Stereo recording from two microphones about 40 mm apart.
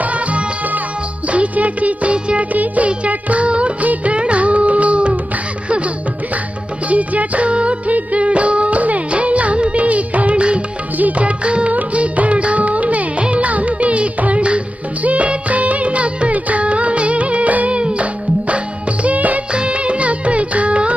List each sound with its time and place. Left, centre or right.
0.0 s music: right
6.9 s music: right
19.0 s music: right
19.5 s music: right